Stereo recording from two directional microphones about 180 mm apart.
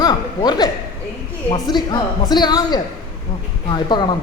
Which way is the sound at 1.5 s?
25° left (ahead or behind).